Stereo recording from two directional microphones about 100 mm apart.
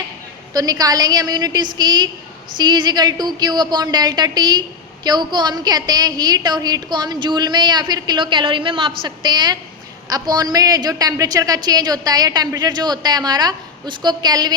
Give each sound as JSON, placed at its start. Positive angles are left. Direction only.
{"t": 0.5, "sound": "a woman's voice", "side_deg": -40}